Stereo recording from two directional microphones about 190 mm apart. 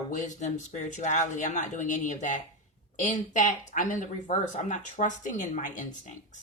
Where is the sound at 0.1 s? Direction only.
40° left (ahead or behind).